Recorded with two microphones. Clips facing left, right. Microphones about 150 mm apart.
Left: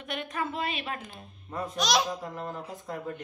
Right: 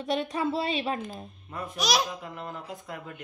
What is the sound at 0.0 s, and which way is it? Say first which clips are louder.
A woman's voice: right 6 dB; 35° right (ahead or behind).